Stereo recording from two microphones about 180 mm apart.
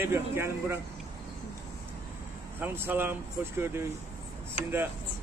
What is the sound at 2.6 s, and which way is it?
Speech, 10° right (ahead or behind).